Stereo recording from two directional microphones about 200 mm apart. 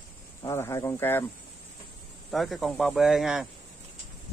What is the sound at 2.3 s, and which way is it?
Speech, centre (ahead or behind).